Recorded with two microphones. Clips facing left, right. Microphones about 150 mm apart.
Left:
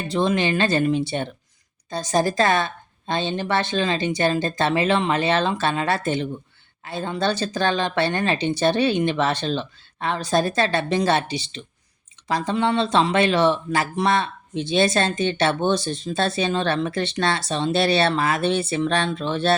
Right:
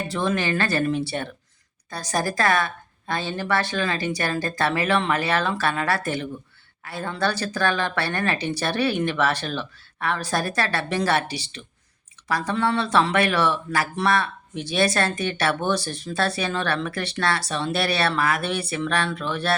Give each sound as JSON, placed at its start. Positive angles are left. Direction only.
{"t": 0.1, "sound": "speech", "side_deg": 20}